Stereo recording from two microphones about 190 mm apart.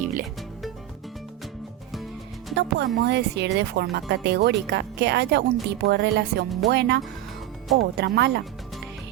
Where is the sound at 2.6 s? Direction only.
60° right (ahead or behind).